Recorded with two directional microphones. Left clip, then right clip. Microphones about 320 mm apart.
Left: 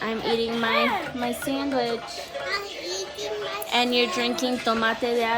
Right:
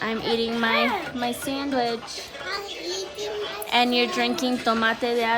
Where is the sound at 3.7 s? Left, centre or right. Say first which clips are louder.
Right 1 dB; right.